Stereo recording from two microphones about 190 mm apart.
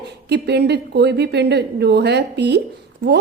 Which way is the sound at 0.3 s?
60° right (ahead or behind).